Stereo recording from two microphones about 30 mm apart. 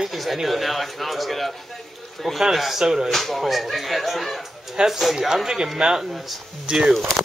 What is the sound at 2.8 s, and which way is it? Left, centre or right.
Speech, centre.